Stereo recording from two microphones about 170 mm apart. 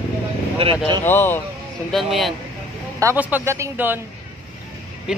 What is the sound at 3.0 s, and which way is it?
Speech, 10° right (ahead or behind).